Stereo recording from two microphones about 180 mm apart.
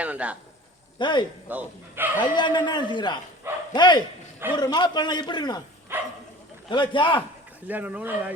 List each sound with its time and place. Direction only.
0.0 s a man's voice: 5° right (ahead or behind)
0.9 s a man's voice: 25° left (ahead or behind)
1.5 s speech: 10° right (ahead or behind)
2.2 s a man's voice: 25° left (ahead or behind)
3.4 s speech: 15° right (ahead or behind)
3.8 s a man's voice: 25° left (ahead or behind)
5.9 s speech: 10° right (ahead or behind)
6.7 s a man's voice: 25° left (ahead or behind)
7.7 s speech: 10° right (ahead or behind)